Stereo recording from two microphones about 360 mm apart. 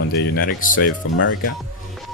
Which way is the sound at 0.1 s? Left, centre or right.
Left.